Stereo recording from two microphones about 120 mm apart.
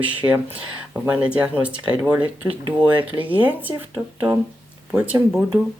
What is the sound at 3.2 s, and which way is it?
Speech, 15° right (ahead or behind).